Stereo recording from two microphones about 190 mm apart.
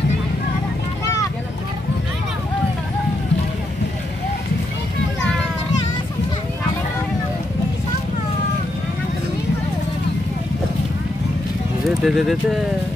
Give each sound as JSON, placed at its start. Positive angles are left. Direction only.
{"t": 1.0, "sound": "vehicle", "side_deg": 15}
{"t": 12.0, "sound": "speech", "side_deg": 0}